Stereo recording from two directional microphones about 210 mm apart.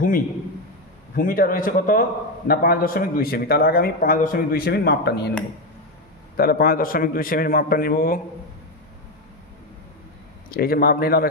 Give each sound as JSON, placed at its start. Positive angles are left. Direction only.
{"t": 1.1, "sound": "a man's voice", "side_deg": 40}
{"t": 6.3, "sound": "a man's voice", "side_deg": 45}
{"t": 10.5, "sound": "a man's voice", "side_deg": 45}